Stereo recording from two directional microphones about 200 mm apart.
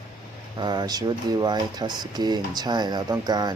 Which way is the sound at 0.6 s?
20° right (ahead or behind).